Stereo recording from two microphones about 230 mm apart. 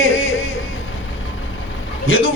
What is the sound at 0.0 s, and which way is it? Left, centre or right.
Music, left.